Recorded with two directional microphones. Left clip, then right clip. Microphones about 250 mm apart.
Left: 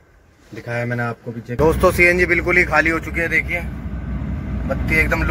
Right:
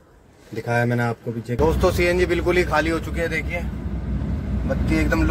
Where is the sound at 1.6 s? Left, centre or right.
Centre.